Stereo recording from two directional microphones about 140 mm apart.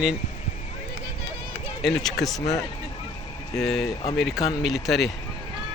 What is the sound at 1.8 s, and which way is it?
Speech, centre (ahead or behind).